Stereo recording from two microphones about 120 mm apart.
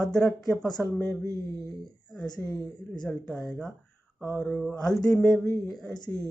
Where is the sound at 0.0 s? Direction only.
5° left (ahead or behind).